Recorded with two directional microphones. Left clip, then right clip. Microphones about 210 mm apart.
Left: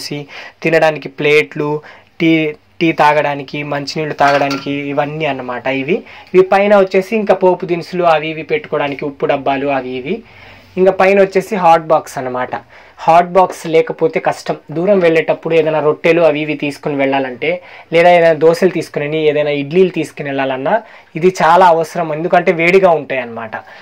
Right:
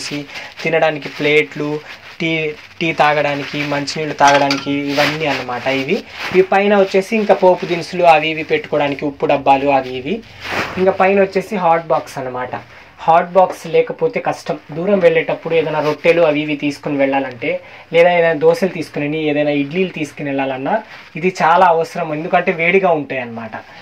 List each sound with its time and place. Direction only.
0.7 s speech: 50° left (ahead or behind)
11.0 s speech: 50° left (ahead or behind)